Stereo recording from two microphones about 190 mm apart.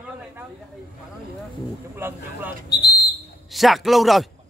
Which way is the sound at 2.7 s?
60° left (ahead or behind).